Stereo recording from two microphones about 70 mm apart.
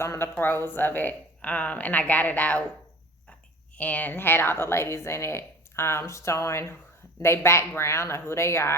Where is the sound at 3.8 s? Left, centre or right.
Left.